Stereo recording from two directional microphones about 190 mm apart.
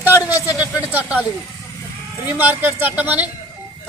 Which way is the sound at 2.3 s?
10° right (ahead or behind).